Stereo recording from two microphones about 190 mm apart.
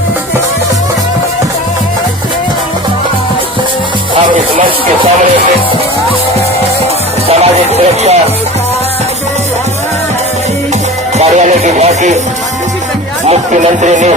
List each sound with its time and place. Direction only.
7.3 s music: 35° right (ahead or behind)
11.2 s music: 35° right (ahead or behind)
13.2 s speech: 35° right (ahead or behind)